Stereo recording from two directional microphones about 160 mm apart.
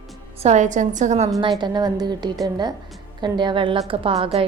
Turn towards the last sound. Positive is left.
turn(degrees=-40)  # may be behind; listen again after turning